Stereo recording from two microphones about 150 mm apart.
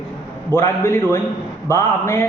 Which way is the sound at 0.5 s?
15° left (ahead or behind).